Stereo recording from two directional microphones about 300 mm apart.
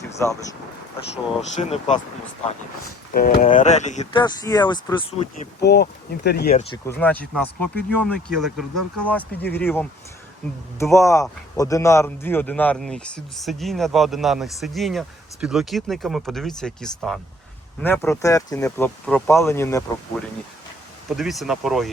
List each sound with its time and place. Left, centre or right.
0.2 s speech: centre
1.1 s speech: left
3.2 s speech: left
5.6 s speech: left
6.8 s a man's voice: centre